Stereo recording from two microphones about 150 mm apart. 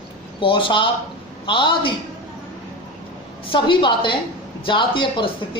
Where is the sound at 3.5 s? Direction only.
35° left (ahead or behind).